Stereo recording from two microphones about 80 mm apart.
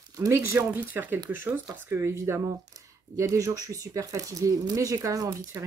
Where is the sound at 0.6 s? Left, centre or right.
Right.